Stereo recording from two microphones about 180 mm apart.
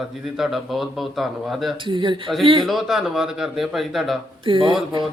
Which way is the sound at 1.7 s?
25° right (ahead or behind).